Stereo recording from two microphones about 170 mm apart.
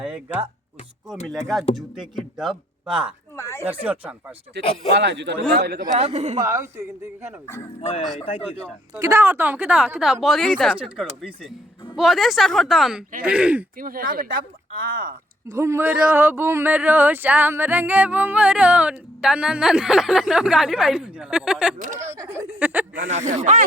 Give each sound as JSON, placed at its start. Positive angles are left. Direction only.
{"t": 0.0, "sound": "speech", "side_deg": -10}
{"t": 1.5, "sound": "speech", "side_deg": 0}
{"t": 3.3, "sound": "speech", "side_deg": 15}
{"t": 3.6, "sound": "speech", "side_deg": -10}
{"t": 4.6, "sound": "speech", "side_deg": -85}
{"t": 5.6, "sound": "speech", "side_deg": -70}
{"t": 6.0, "sound": "speech", "side_deg": -40}
{"t": 6.4, "sound": "speech", "side_deg": -15}
{"t": 7.8, "sound": "speech", "side_deg": 35}
{"t": 8.4, "sound": "speech", "side_deg": -15}
{"t": 11.9, "sound": "speech", "side_deg": 0}
{"t": 13.7, "sound": "speech", "side_deg": -55}
{"t": 15.4, "sound": "speech", "side_deg": -15}
{"t": 23.0, "sound": "speech", "side_deg": -45}